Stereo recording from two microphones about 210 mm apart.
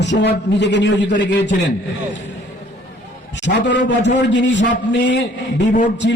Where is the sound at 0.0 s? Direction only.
55° left (ahead or behind).